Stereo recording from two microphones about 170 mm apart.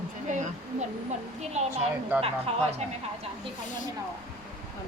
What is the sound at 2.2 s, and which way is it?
Speech, 40° right (ahead or behind).